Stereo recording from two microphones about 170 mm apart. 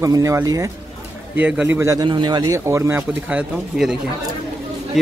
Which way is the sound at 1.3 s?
10° right (ahead or behind).